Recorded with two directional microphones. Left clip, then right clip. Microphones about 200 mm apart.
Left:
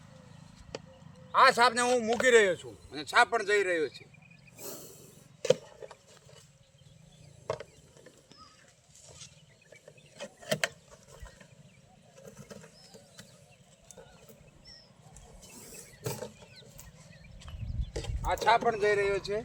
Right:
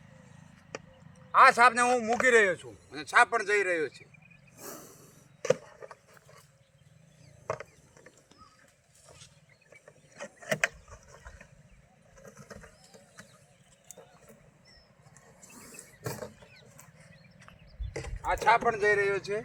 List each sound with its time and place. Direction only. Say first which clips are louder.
1.3 s speech: right 3 dB; centre (ahead or behind)
4.5 s a sound: even; 10° left (ahead or behind)
7.4 s mechanisms: even; 10° left (ahead or behind)
9.8 s vehicle: even; 5° left (ahead or behind)
15.5 s mechanisms: even; 20° left (ahead or behind)
18.2 s speech: right 1 dB; 5° right (ahead or behind)